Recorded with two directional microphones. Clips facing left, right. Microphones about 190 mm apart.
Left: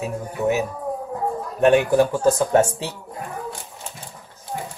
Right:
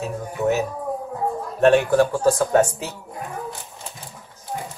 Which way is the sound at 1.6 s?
15° left (ahead or behind).